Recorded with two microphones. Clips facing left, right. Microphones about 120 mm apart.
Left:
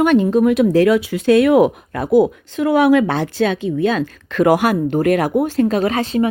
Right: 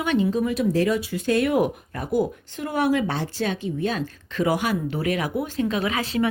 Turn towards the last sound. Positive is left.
turn(degrees=25)  # may be behind; listen again after turning